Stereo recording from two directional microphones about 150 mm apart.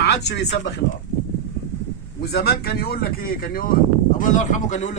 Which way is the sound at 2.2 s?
90° left.